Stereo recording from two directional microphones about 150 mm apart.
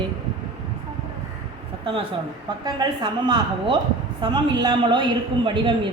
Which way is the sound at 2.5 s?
30° right (ahead or behind).